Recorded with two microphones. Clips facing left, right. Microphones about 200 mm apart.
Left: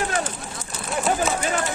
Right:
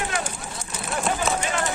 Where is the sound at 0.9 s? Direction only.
Centre (ahead or behind).